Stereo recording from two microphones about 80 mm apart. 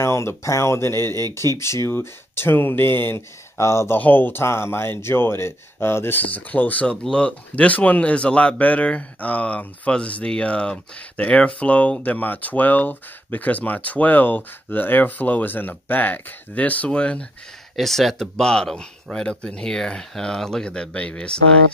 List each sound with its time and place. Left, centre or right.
0.0 s speech: left; by 17.3 s centre
17.7 s speech: centre